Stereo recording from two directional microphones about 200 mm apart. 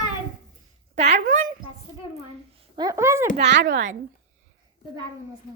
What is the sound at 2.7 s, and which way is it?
Speech, 15° right (ahead or behind).